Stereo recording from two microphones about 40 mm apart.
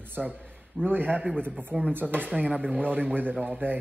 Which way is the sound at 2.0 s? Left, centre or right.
Right.